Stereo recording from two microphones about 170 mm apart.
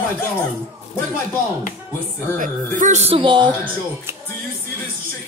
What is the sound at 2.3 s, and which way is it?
Speech, 50° right (ahead or behind).